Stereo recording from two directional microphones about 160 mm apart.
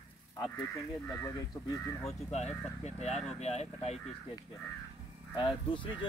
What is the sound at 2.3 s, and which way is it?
Speech, 45° left (ahead or behind).